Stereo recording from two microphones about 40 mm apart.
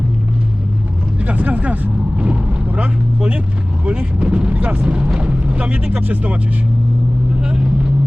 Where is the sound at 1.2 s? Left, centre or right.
Right.